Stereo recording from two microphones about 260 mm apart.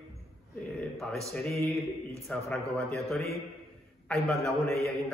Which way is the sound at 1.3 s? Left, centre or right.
Centre.